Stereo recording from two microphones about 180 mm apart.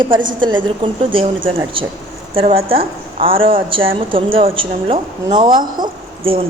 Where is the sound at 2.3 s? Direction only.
30° right (ahead or behind).